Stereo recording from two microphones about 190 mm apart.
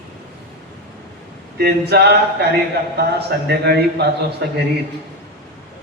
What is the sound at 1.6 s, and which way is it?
A man's voice, 55° right (ahead or behind).